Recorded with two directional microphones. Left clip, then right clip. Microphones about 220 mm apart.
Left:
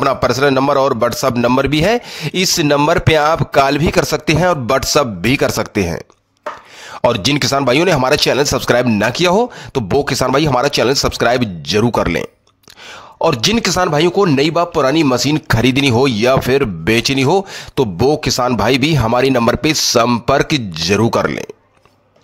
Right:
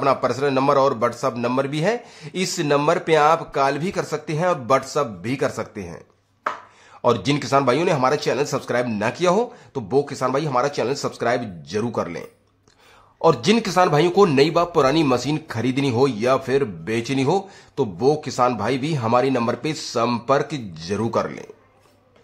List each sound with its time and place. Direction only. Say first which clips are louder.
0.0 s speech: left 6 dB; 40° left (ahead or behind)